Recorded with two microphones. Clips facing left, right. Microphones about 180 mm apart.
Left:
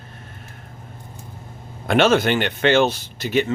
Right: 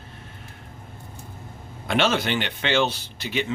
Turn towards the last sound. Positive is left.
turn(degrees=45)  # may be behind; listen again after turning